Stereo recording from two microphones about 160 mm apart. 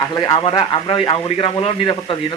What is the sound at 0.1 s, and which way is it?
A man's voice, 25° left (ahead or behind).